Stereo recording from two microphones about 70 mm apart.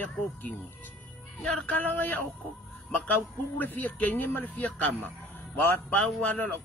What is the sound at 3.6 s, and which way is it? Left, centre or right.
Speech, left.